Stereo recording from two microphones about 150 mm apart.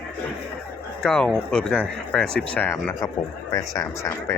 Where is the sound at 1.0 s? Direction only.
5° left (ahead or behind); by 4.4 s 20° left (ahead or behind).